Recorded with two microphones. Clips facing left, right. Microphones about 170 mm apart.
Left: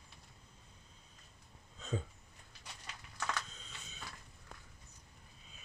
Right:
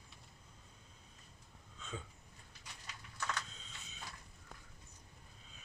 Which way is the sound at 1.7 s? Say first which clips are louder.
Left 7 dB; 35° left (ahead or behind).